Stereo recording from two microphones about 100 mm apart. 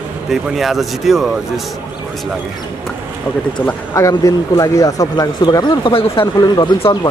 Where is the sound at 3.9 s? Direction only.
35° left (ahead or behind).